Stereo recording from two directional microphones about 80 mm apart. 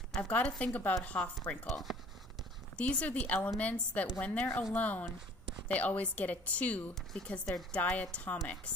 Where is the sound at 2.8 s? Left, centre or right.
Centre.